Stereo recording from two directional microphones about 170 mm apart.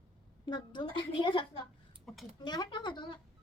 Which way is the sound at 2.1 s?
Centre (ahead or behind).